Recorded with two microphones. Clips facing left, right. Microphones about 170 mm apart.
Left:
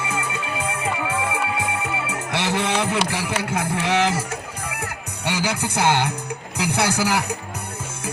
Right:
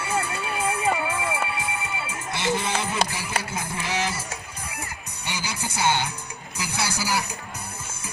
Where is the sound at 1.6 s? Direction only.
85° left; by 6.1 s 65° left (ahead or behind).